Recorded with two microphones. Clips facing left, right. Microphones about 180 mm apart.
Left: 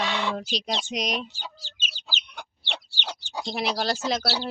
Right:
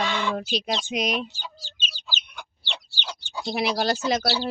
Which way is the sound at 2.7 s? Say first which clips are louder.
Left 1 dB; 65° left (ahead or behind).